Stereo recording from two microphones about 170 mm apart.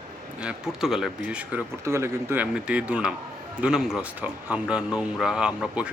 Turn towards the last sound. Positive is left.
turn(degrees=-5)  # may be behind; listen again after turning